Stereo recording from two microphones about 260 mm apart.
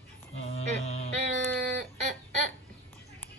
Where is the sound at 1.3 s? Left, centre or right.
Right.